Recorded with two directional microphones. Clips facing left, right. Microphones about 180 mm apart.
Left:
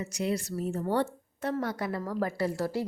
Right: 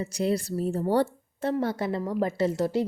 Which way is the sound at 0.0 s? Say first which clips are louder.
Right 4 dB; 35° right (ahead or behind).